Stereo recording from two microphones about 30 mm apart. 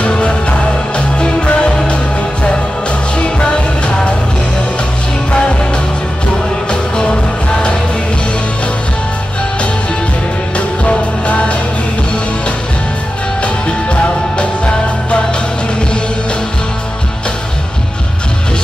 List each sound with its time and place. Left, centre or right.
0.0 s music: left
3.2 s music: left
6.7 s music: left
11.2 s music: left
13.4 s music: left